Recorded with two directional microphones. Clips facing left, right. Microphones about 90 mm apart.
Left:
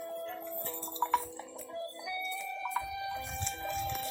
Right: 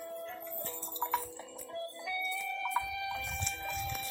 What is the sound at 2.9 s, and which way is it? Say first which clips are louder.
Music: left 1 dB; 25° left (ahead or behind).